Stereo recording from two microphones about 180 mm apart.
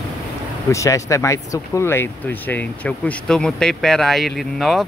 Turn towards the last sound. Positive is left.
turn(degrees=0)  # may be behind; listen again after turning